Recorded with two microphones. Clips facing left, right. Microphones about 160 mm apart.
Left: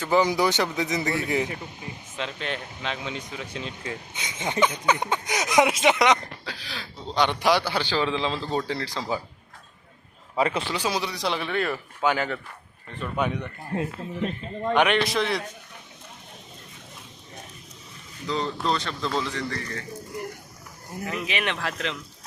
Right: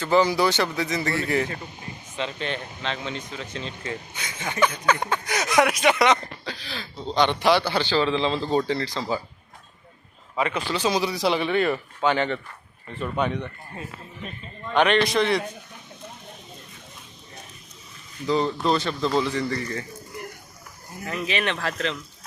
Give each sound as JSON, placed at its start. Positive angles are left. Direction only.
{"t": 0.0, "sound": "speech", "side_deg": 15}
{"t": 2.1, "sound": "speech", "side_deg": 0}
{"t": 4.1, "sound": "speech", "side_deg": 20}
{"t": 10.3, "sound": "speech", "side_deg": 35}
{"t": 10.7, "sound": "speech", "side_deg": 10}
{"t": 11.0, "sound": "speech", "side_deg": -5}
{"t": 14.7, "sound": "speech", "side_deg": 10}
{"t": 18.3, "sound": "speech", "side_deg": -10}
{"t": 21.1, "sound": "speech", "side_deg": 15}